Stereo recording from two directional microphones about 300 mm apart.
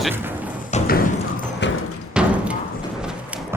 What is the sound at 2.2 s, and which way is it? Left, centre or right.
Music, centre.